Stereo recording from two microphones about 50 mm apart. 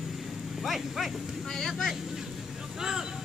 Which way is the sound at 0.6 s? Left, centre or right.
Centre.